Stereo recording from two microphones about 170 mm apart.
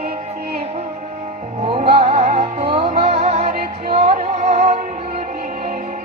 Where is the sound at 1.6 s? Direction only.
35° right (ahead or behind).